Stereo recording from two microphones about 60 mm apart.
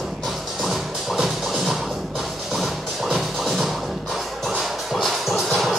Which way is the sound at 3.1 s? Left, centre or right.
Centre.